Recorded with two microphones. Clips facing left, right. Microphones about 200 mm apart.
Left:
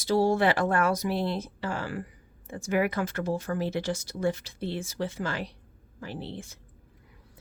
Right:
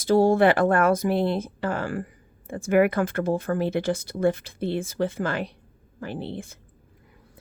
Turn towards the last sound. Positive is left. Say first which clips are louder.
# right 5 dB
turn(degrees=-55)  # may be behind; listen again after turning